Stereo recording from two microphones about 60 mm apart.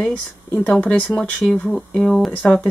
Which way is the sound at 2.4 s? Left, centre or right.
Left.